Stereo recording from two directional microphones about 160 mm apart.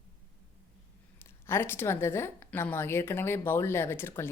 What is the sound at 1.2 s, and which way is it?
A woman's voice, 15° left (ahead or behind).